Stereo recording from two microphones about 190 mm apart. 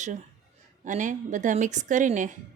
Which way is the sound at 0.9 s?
40° right (ahead or behind).